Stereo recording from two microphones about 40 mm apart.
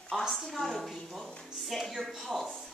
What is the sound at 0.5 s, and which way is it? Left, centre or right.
Speech, centre.